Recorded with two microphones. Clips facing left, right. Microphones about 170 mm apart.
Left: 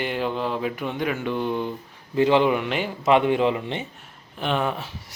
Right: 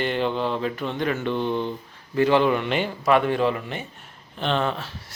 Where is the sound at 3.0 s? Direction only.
20° left (ahead or behind).